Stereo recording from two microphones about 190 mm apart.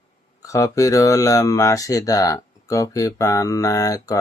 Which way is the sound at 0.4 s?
15° left (ahead or behind).